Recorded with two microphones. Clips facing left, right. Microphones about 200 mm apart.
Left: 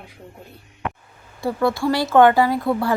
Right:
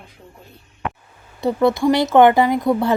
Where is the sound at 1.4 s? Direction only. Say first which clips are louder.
Right 4 dB; 20° right (ahead or behind).